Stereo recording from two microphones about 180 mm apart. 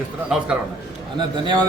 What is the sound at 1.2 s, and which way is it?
Speech, 25° right (ahead or behind).